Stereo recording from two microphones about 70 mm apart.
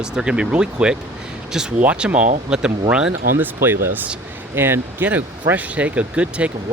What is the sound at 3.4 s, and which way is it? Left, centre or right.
Speech, right.